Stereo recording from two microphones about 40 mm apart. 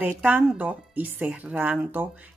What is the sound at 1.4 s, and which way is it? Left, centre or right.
Speech, right.